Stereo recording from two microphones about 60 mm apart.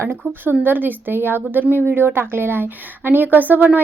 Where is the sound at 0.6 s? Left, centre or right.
Right.